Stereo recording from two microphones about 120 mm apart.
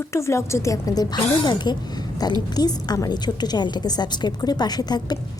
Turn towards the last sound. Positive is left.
turn(degrees=35)  # may be behind; listen again after turning